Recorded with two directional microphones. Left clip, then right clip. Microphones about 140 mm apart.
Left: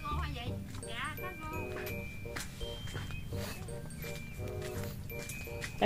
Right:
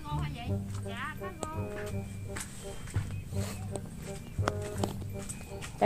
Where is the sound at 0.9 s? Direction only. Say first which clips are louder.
Right 1 dB; 90° right.